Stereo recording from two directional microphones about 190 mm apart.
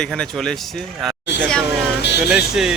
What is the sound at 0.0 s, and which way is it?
Speech, 5° left (ahead or behind).